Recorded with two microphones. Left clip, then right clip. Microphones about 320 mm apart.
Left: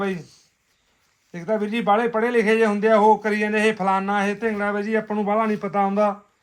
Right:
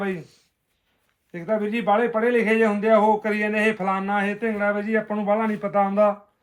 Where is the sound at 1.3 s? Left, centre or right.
Left.